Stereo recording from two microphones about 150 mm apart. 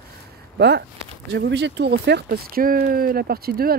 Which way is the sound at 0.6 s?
90° right.